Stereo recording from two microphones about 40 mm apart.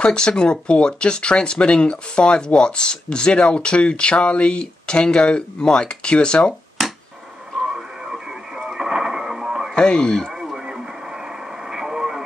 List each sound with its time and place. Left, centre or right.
0.0 s speech: left
7.6 s radio: centre
8.6 s a sound: centre
9.8 s speech: left
10.3 s radio: centre